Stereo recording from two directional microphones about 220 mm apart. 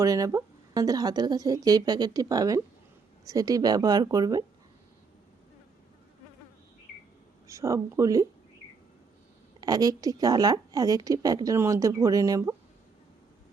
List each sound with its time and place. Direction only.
0.0 s a woman's voice: 15° right (ahead or behind)
7.4 s a woman's voice: 15° right (ahead or behind)
9.6 s a woman's voice: 15° right (ahead or behind)